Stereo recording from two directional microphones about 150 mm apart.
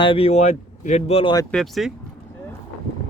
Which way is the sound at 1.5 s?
Centre (ahead or behind).